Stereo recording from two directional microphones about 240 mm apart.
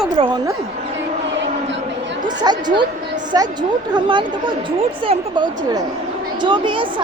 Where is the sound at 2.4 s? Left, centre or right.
Centre.